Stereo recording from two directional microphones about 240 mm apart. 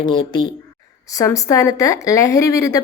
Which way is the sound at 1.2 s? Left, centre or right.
Centre.